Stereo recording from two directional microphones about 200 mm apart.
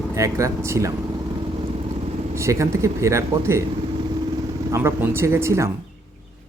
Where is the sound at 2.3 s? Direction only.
15° right (ahead or behind).